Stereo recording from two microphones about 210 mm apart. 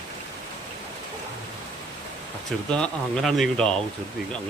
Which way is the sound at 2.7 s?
5° left (ahead or behind).